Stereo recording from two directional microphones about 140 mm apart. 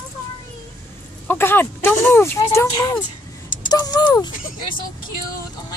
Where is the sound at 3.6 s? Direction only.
30° left (ahead or behind).